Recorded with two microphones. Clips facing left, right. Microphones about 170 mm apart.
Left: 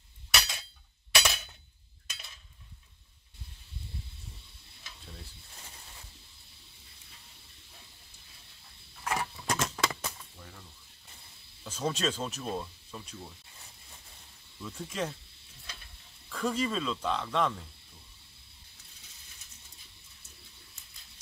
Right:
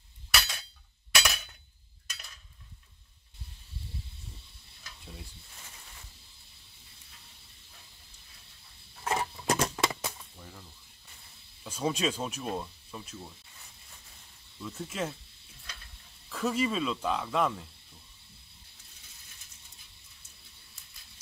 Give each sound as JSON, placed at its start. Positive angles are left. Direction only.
{"t": 0.3, "sound": "chink", "side_deg": 0}
{"t": 9.0, "sound": "a sound", "side_deg": -25}
{"t": 9.6, "sound": "a sound", "side_deg": -10}
{"t": 11.6, "sound": "speech", "side_deg": -10}
{"t": 14.6, "sound": "speech", "side_deg": -5}
{"t": 16.3, "sound": "speech", "side_deg": -5}